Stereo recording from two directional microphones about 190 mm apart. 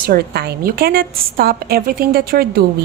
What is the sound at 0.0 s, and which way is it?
A woman's voice, 55° right (ahead or behind).